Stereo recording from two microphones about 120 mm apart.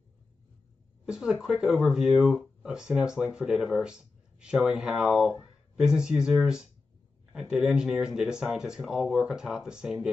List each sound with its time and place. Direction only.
1.0 s speech: 5° right (ahead or behind)